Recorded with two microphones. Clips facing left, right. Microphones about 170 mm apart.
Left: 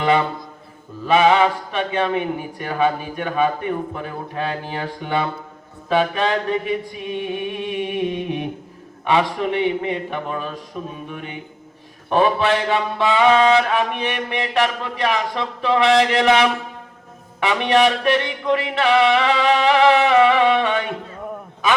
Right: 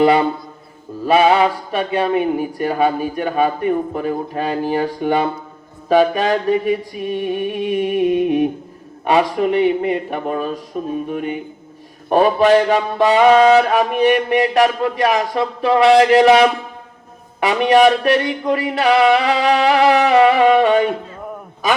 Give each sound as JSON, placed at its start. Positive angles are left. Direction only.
{"t": 0.0, "sound": "music", "side_deg": -35}